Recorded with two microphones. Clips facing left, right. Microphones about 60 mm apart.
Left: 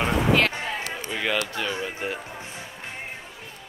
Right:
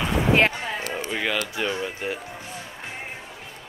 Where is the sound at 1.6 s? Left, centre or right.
Centre.